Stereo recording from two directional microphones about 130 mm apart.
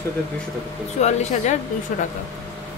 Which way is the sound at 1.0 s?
60° left (ahead or behind).